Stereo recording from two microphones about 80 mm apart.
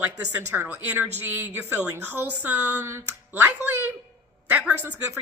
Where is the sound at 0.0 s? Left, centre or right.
Right.